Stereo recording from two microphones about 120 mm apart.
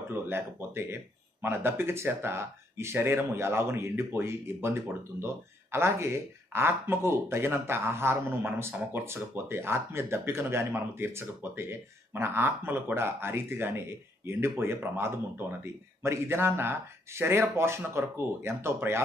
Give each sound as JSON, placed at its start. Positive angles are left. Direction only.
{"t": 0.1, "sound": "speech", "side_deg": -20}